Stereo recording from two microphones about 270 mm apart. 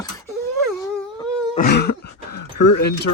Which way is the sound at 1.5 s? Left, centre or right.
Left.